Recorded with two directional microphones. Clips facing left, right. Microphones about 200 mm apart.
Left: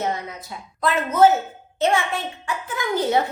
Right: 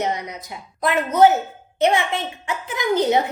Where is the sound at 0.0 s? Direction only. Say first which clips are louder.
Right 2 dB; 20° right (ahead or behind).